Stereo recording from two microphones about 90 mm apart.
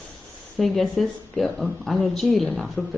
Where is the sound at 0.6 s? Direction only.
Centre (ahead or behind).